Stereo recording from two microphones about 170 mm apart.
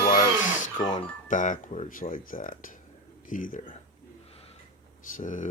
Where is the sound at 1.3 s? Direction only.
50° left (ahead or behind).